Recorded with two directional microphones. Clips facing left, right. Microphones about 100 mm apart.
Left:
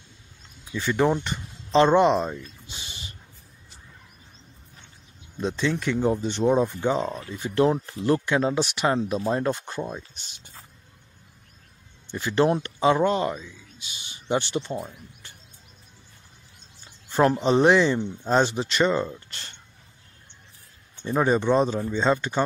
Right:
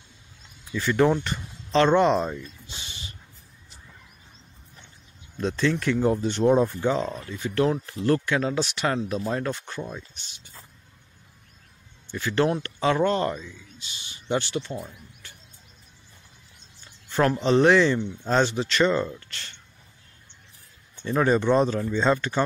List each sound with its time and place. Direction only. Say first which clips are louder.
0.7 s speech: right 1 dB; 5° left (ahead or behind)
2.7 s a sound: even; 30° left (ahead or behind)
5.4 s speech: right 1 dB; 10° left (ahead or behind)
6.9 s speech: even; 15° left (ahead or behind)
12.1 s speech: left 2 dB; 20° left (ahead or behind)
13.8 s speech: left 1 dB; 25° left (ahead or behind)
16.8 s speech: left 2 dB; 25° left (ahead or behind)
21.0 s speech: even; 20° left (ahead or behind)